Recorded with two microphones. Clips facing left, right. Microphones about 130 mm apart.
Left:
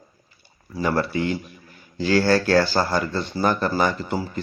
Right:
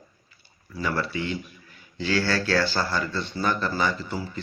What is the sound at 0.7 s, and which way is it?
Speech, 40° left (ahead or behind).